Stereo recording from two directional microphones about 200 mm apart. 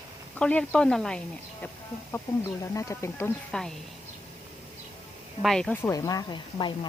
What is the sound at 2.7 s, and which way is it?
A woman's voice, 15° left (ahead or behind).